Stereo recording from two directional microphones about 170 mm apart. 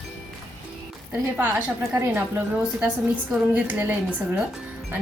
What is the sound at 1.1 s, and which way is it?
A woman's voice, 10° right (ahead or behind).